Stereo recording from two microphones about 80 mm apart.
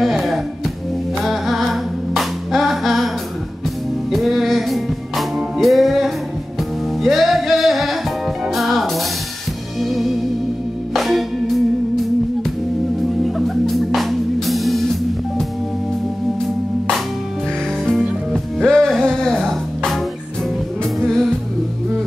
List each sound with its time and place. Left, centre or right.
0.0 s music: centre
4.1 s music: centre
13.2 s music: centre
18.3 s music: centre